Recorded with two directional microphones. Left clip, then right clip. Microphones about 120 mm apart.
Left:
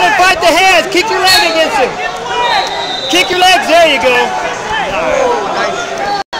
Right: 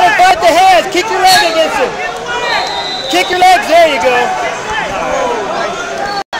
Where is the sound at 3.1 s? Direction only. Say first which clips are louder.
Right 1 dB; 45° left (ahead or behind).